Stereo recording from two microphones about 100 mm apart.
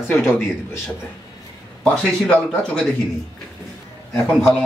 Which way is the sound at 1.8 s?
10° left (ahead or behind).